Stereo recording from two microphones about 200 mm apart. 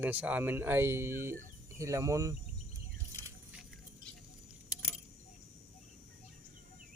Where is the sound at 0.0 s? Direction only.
10° right (ahead or behind).